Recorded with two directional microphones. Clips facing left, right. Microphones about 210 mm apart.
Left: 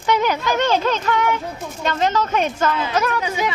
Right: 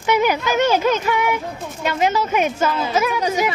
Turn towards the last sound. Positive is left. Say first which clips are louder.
# right 3 dB
turn(degrees=-40)  # may be behind; listen again after turning